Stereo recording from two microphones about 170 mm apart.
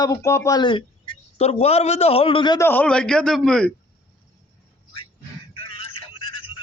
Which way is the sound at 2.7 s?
10° left (ahead or behind).